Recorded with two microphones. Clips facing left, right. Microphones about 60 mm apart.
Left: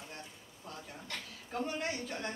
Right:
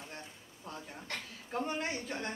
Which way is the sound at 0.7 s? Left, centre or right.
Right.